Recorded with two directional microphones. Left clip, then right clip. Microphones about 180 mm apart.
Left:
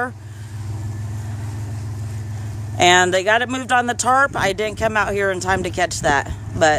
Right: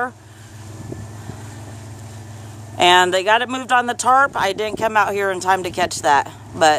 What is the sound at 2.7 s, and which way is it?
Speech, centre (ahead or behind).